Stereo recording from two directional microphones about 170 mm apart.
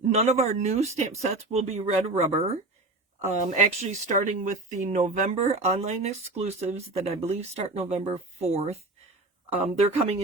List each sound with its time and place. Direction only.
0.1 s speech: 40° right (ahead or behind)
9.9 s speech: 40° right (ahead or behind)